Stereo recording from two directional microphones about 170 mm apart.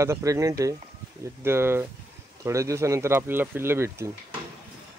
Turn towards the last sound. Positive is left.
turn(degrees=-15)  # may be behind; listen again after turning